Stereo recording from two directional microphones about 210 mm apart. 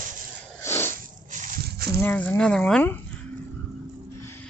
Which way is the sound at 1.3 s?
40° right (ahead or behind).